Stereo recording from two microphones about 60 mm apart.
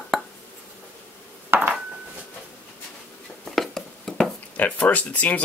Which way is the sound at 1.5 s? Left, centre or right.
Right.